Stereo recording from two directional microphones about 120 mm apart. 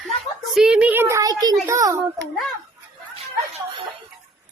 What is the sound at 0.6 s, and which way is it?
A child's voice, 5° right (ahead or behind).